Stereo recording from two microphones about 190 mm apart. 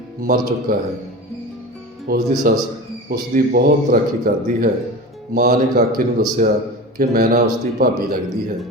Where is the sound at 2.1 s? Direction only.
50° right (ahead or behind).